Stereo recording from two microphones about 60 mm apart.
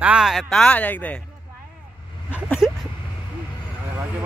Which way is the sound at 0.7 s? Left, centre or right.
Left.